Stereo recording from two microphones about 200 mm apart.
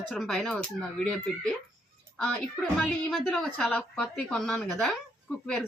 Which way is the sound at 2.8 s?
Centre (ahead or behind).